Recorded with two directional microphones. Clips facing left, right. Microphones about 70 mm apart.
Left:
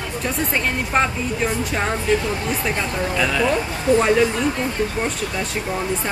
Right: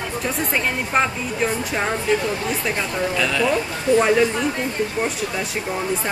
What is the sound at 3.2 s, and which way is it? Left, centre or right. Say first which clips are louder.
Speech: left 2 dB; centre.